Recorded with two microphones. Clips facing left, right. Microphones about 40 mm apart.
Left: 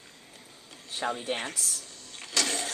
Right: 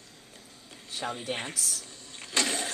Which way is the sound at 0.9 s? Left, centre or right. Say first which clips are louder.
Left 2 dB; centre.